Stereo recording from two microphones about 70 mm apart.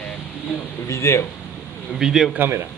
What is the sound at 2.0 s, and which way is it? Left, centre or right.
Speech, centre.